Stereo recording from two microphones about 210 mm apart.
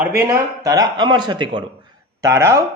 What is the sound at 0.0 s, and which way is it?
A man's voice, 10° right (ahead or behind).